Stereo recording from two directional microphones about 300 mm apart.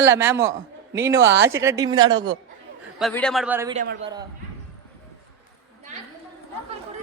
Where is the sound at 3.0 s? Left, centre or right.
Centre.